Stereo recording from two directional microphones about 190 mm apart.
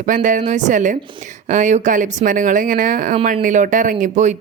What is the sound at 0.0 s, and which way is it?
A woman's voice, 45° right (ahead or behind).